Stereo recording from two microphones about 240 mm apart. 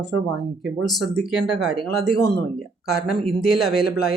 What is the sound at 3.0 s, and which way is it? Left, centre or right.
Speech, left.